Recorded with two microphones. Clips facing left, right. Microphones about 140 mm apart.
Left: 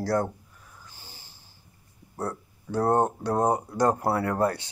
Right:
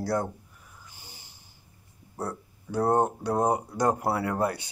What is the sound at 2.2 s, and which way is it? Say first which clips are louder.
Speech: left 2 dB; 15° right (ahead or behind).